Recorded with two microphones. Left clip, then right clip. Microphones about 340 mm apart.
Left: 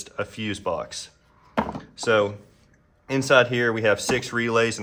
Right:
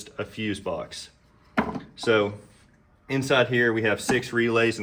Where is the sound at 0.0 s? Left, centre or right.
Centre.